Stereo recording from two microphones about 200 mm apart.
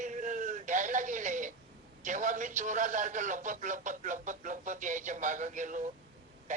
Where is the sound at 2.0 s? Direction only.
40° right (ahead or behind).